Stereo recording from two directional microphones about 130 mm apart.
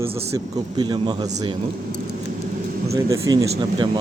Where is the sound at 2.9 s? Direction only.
25° right (ahead or behind).